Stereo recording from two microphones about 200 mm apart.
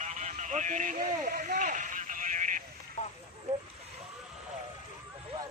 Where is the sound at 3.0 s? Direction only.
35° left (ahead or behind).